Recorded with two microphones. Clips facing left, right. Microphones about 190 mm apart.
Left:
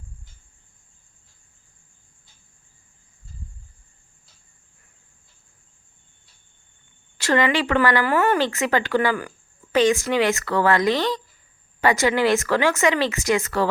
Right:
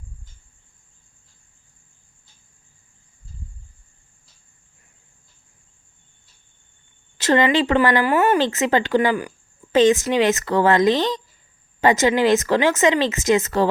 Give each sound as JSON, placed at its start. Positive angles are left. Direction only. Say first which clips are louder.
{"t": 7.2, "sound": "speech", "louder": "right 3 dB", "side_deg": -25}